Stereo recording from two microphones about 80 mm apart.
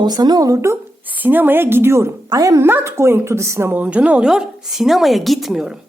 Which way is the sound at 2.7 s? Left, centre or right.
Right.